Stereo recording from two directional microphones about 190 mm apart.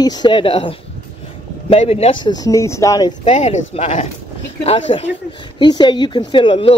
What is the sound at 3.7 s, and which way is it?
Speech, 35° left (ahead or behind).